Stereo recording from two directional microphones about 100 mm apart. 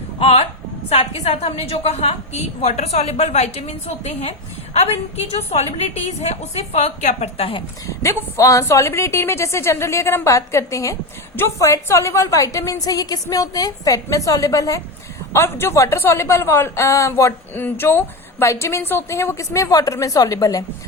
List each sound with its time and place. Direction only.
0.2 s a woman's voice: 80° left
1.2 s a woman's voice: 90° left
7.9 s a woman's voice: 30° left (ahead or behind)